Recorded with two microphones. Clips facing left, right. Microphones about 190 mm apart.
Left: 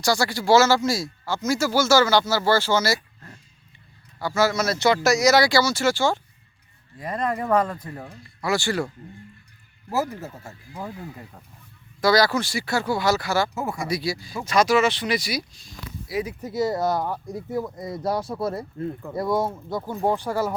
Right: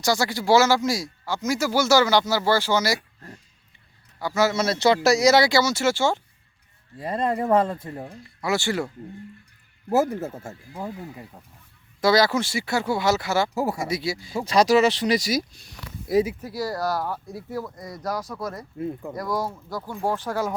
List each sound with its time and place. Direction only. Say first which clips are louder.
0.0 s speech: even; 20° right (ahead or behind)
4.2 s speech: even; 15° right (ahead or behind)
11.9 s speech: even; 25° right (ahead or behind); by 15.4 s 40° right (ahead or behind)
15.5 s a sound: left 2 dB; 60° right (ahead or behind)
16.4 s speech: left 4 dB; 20° left (ahead or behind)
18.8 s speech: right 1 dB; 10° right (ahead or behind)
19.1 s speech: left 8 dB; 25° left (ahead or behind)